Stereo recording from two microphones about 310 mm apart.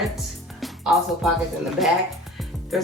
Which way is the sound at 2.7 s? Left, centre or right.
Centre.